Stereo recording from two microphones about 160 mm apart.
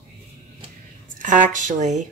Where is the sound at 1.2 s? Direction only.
55° right (ahead or behind).